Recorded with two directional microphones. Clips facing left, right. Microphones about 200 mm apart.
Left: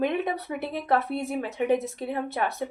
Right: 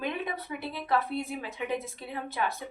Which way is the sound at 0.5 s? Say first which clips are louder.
Left 3 dB; 65° left (ahead or behind).